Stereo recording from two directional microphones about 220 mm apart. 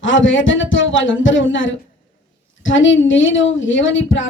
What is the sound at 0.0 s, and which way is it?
A woman's voice, 60° left (ahead or behind).